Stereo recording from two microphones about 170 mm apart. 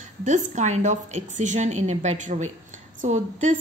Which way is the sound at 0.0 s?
45° right (ahead or behind).